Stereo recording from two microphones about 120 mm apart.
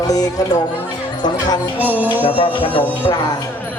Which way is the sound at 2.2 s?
45° left (ahead or behind).